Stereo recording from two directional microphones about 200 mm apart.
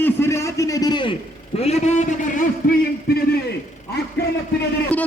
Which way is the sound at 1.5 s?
30° left (ahead or behind).